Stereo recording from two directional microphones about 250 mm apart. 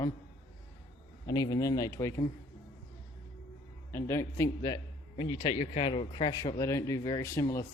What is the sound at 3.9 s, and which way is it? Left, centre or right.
A man's voice, centre.